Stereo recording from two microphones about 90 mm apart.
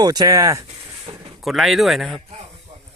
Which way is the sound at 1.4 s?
Centre (ahead or behind).